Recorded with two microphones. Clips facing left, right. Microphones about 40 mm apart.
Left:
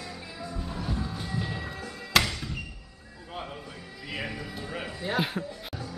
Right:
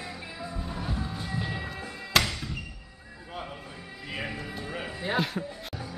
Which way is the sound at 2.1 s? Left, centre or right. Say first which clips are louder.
Left 1 dB; centre.